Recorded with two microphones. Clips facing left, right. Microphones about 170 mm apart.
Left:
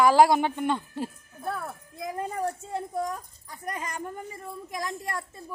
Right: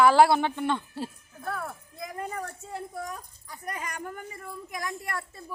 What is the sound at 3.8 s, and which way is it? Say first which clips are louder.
Speech: left 2 dB; 25° left (ahead or behind).